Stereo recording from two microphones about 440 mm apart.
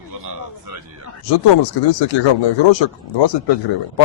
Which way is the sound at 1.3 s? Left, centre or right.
Left.